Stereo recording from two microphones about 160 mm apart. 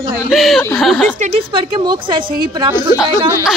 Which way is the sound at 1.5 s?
30° right (ahead or behind).